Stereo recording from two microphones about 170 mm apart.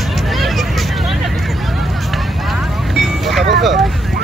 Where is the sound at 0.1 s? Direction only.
Centre (ahead or behind).